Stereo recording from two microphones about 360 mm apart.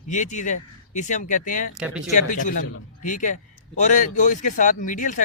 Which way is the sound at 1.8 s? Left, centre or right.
Centre.